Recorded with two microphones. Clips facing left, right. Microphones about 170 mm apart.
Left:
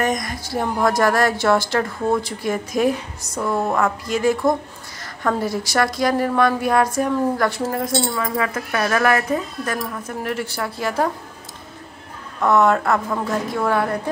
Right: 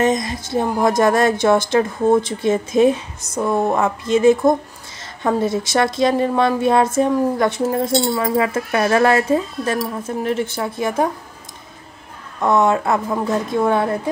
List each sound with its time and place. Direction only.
0.0 s a woman's voice: 25° right (ahead or behind)
12.4 s a woman's voice: 20° right (ahead or behind)